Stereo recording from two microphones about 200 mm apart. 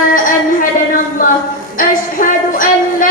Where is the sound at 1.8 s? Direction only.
40° left (ahead or behind).